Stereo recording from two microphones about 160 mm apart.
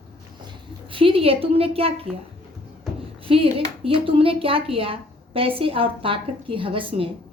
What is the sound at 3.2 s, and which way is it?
A woman's voice, 35° right (ahead or behind).